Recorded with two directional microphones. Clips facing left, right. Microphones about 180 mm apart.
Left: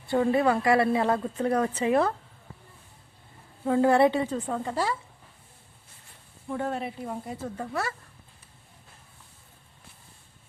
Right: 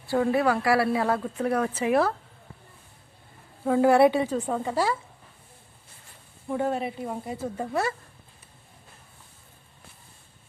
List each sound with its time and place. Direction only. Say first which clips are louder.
0.2 s speech: even; centre (ahead or behind)
3.7 s a woman's voice: right 2 dB; 10° right (ahead or behind)
6.5 s a woman's voice: right 3 dB; 5° right (ahead or behind)
7.6 s a woman's voice: right 5 dB; 20° right (ahead or behind)